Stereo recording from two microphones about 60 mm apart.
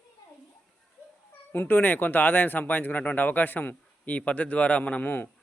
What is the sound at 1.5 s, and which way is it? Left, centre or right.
A man's voice, left.